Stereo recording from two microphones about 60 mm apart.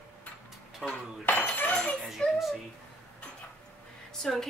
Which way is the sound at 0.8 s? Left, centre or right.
Centre.